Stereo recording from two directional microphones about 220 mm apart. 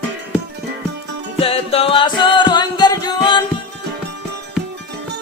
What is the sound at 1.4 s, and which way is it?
Music, 25° left (ahead or behind).